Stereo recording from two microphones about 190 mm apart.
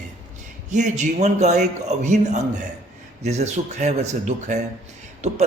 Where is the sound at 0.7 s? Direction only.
40° right (ahead or behind).